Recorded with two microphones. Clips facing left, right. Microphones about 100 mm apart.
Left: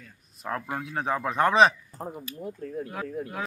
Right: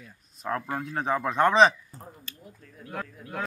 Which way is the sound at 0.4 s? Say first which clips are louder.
Right 1 dB; centre (ahead or behind).